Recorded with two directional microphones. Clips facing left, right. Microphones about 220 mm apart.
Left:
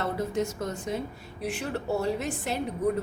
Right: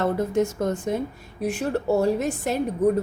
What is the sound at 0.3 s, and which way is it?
A woman's voice, 50° right (ahead or behind).